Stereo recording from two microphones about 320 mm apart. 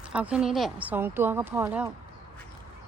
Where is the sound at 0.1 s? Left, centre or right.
Centre.